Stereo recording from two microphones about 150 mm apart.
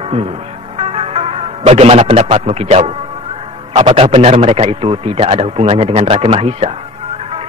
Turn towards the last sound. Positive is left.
turn(degrees=-40)  # may be behind; listen again after turning